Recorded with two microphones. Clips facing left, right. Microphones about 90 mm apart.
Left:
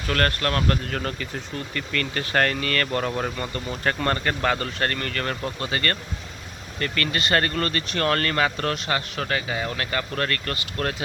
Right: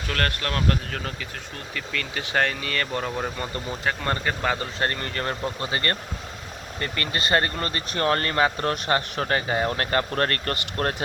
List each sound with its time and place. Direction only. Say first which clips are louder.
0.1 s speech: left 4 dB; centre (ahead or behind)
3.3 s speech: left 1 dB; 20° right (ahead or behind)
3.7 s speech: left 3 dB; 10° right (ahead or behind); by 10.9 s 40° right (ahead or behind)